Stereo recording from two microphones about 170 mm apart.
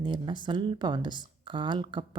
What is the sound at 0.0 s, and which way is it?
Speech, 25° right (ahead or behind).